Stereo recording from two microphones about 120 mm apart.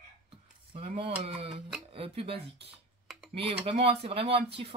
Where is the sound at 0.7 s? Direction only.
55° right (ahead or behind).